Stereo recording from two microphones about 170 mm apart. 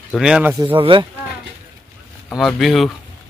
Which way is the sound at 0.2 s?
10° right (ahead or behind).